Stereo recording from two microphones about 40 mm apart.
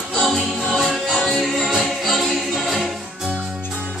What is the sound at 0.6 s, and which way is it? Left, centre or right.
Music, centre.